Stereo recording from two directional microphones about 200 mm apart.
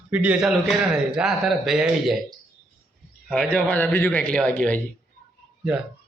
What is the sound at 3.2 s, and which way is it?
A man's voice, 5° left (ahead or behind).